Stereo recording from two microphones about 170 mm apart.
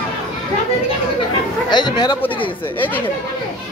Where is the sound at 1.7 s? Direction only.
25° left (ahead or behind).